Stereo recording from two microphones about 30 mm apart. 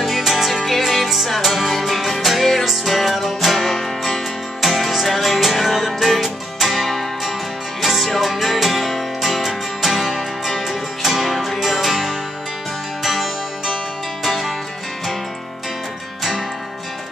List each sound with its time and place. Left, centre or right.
0.2 s music: centre
10.7 s music: centre
11.3 s music: centre
11.6 s music: centre